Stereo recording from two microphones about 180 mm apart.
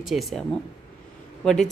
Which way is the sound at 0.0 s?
Centre (ahead or behind).